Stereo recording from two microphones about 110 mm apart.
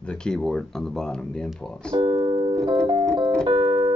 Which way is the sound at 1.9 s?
50° right (ahead or behind).